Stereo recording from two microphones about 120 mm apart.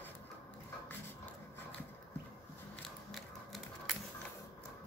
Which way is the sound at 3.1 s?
Centre (ahead or behind).